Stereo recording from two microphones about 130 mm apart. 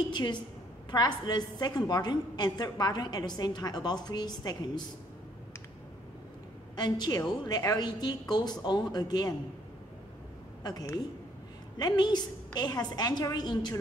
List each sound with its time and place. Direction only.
0.1 s a woman's voice: 35° left (ahead or behind)
6.8 s a woman's voice: 30° left (ahead or behind)
10.6 s a woman's voice: 30° left (ahead or behind)